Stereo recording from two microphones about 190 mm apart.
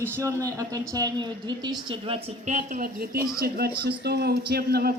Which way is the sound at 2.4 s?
40° right (ahead or behind).